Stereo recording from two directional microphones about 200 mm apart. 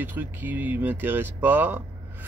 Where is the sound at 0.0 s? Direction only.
10° right (ahead or behind).